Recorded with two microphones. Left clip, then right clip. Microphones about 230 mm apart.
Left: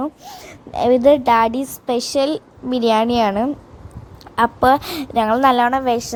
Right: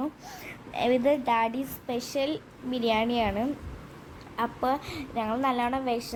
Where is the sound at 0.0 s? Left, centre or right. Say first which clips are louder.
Left 8 dB; left.